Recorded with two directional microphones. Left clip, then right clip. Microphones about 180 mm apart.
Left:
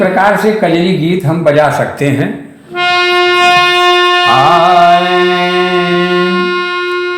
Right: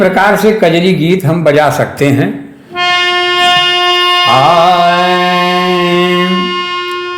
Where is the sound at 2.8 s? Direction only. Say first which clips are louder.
Left 1 dB; 15° right (ahead or behind).